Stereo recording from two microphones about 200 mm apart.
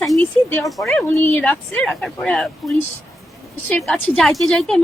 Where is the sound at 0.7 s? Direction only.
Centre (ahead or behind).